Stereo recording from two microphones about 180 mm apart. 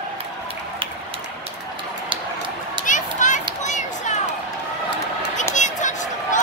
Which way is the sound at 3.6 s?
40° left (ahead or behind).